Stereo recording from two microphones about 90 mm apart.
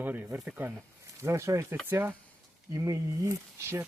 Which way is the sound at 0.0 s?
20° right (ahead or behind).